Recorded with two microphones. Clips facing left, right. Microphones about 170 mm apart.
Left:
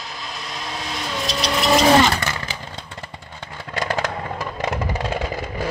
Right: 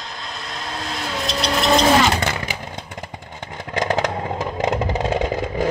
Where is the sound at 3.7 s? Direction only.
20° right (ahead or behind).